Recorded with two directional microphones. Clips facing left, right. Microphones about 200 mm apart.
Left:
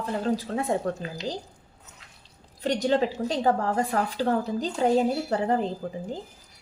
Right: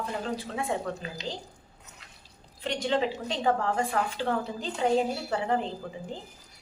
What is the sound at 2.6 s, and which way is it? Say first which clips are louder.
A woman's voice: left 4 dB; 40° left (ahead or behind).